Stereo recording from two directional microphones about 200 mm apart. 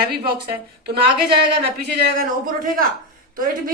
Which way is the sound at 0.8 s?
50° right (ahead or behind).